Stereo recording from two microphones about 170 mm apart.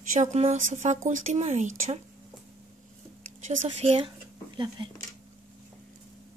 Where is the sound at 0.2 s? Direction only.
40° right (ahead or behind).